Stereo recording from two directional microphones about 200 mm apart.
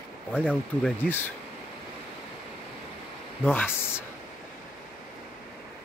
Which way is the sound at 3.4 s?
10° left (ahead or behind).